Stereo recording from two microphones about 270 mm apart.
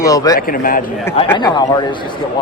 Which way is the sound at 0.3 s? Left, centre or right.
Left.